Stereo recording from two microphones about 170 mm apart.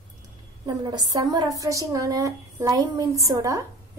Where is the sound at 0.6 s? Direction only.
25° right (ahead or behind).